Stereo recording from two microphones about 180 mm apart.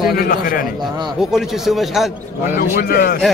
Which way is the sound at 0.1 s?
55° left (ahead or behind).